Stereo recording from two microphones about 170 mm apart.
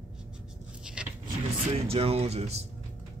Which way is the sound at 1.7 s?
35° right (ahead or behind).